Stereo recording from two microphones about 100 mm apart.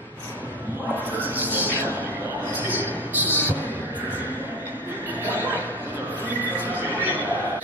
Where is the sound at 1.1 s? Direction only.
15° right (ahead or behind).